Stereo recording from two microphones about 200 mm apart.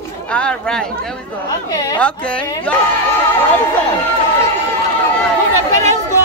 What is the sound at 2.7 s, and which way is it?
Speech, 5° left (ahead or behind).